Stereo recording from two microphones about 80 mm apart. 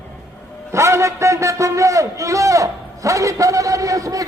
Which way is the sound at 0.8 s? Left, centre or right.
Right.